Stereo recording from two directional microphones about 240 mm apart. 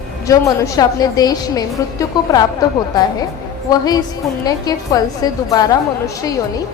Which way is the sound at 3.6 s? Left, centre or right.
Centre.